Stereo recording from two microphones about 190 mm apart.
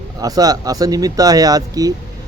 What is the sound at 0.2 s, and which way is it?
Speech, 20° right (ahead or behind).